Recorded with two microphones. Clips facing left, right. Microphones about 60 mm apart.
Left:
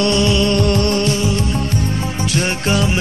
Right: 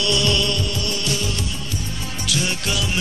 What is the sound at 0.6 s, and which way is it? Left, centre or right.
Music, left.